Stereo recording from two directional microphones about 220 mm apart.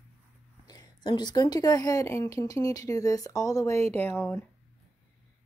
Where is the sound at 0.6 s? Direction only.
15° left (ahead or behind).